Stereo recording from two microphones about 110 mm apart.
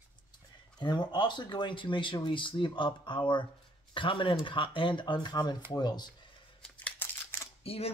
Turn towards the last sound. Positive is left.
turn(degrees=65)  # may be behind; listen again after turning